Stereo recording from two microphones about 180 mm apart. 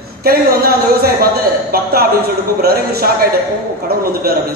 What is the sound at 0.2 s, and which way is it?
A man's voice, 55° right (ahead or behind).